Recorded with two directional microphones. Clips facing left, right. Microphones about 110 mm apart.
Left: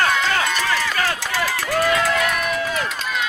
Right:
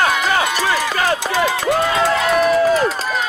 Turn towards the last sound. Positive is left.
turn(degrees=-40)  # may be behind; listen again after turning